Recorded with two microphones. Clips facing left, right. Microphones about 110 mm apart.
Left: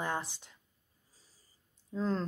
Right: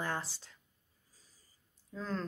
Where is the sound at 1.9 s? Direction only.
25° left (ahead or behind).